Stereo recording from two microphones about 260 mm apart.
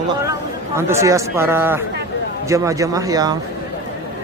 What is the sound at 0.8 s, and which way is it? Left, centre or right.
Speech, centre.